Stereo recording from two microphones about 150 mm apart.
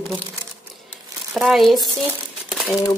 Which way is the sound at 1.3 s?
Centre (ahead or behind).